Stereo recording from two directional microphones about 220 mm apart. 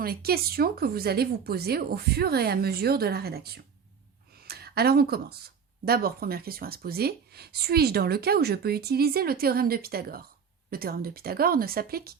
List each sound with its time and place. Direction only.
0.0 s speech: 45° right (ahead or behind)